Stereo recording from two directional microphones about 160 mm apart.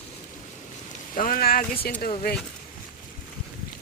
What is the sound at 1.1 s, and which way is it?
Speech, 65° left (ahead or behind).